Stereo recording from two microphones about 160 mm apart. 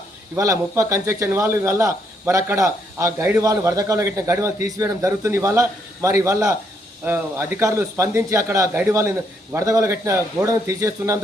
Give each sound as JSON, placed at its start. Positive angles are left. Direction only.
{"t": 0.3, "sound": "a man's voice", "side_deg": -20}